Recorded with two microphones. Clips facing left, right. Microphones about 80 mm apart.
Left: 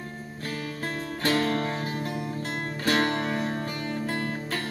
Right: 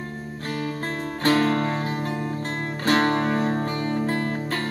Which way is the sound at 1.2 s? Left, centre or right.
Right.